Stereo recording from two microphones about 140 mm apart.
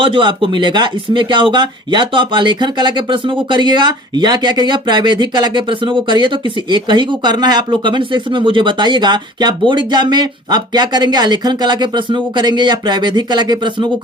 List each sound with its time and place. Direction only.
0.0 s speech: 35° right (ahead or behind)